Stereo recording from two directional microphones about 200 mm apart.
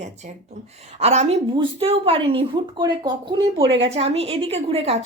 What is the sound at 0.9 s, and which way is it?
A woman's voice, 35° right (ahead or behind).